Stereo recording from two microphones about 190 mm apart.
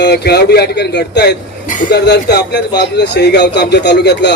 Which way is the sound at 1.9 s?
60° left (ahead or behind).